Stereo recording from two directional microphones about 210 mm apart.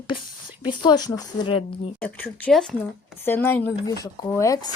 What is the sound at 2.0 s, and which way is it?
Speech, 5° left (ahead or behind).